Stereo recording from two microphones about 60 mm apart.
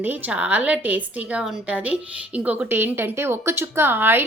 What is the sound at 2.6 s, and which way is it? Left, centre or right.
Speech, right.